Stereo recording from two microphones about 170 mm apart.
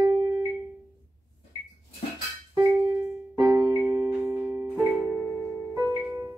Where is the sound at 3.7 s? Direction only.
5° right (ahead or behind).